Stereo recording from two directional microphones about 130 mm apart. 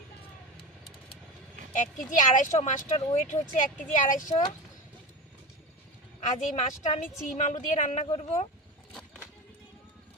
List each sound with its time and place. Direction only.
2.0 s speech: 85° left
6.1 s a woman's voice: 65° left (ahead or behind)
8.9 s a sound: 5° left (ahead or behind)